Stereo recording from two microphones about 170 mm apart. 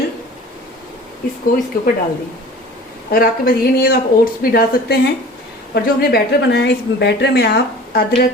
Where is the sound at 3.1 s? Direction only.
60° left (ahead or behind).